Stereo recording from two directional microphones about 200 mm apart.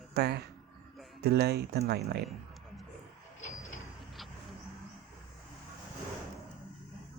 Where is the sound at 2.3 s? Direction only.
Centre (ahead or behind).